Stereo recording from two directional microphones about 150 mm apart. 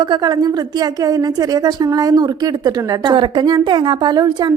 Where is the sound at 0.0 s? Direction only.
30° right (ahead or behind).